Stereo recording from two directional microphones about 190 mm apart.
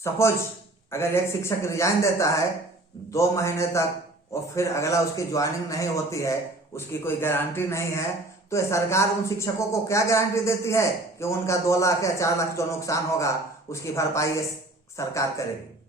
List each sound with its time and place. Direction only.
0.0 s speech: 15° left (ahead or behind)